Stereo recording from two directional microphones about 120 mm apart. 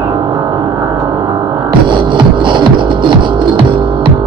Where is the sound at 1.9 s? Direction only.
40° right (ahead or behind).